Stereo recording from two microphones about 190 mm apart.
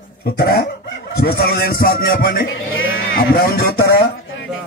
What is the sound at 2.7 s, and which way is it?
Sheep, 90° left.